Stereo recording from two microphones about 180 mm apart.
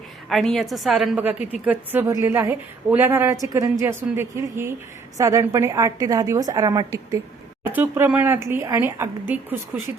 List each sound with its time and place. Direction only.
0.3 s a woman's voice: centre (ahead or behind)